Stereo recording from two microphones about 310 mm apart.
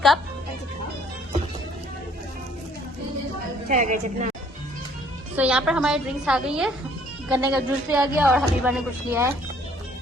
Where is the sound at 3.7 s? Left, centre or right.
Right.